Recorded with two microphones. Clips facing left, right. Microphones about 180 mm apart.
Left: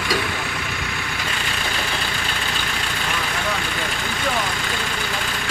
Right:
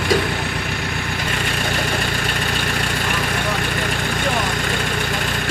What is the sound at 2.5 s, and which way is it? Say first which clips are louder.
Vehicle: right 5 dB; 55° right (ahead or behind).